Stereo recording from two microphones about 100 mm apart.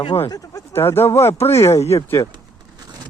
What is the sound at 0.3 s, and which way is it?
Speech, 35° left (ahead or behind).